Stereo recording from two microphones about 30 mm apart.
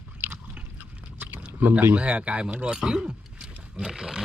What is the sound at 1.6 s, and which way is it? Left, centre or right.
Speech, right.